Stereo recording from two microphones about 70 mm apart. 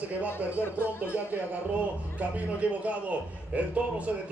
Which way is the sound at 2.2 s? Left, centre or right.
Right.